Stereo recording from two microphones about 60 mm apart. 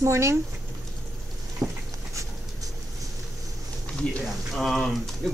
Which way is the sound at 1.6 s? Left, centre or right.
Right.